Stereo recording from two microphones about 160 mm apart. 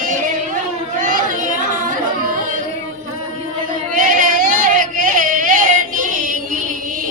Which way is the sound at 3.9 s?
55° right (ahead or behind).